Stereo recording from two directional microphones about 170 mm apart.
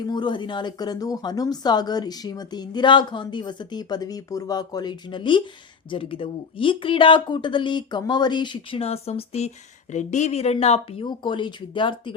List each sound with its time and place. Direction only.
0.0 s speech: 25° left (ahead or behind)